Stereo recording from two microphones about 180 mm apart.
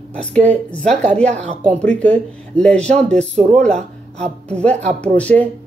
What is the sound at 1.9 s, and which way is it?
Speech, 5° left (ahead or behind).